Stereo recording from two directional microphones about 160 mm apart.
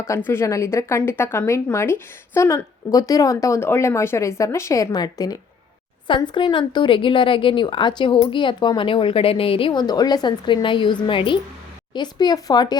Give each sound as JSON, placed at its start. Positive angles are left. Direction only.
{"t": 0.3, "sound": "a woman's voice", "side_deg": 20}